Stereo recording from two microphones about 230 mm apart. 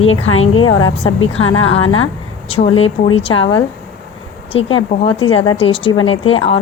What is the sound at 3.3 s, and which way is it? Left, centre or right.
Speech, left.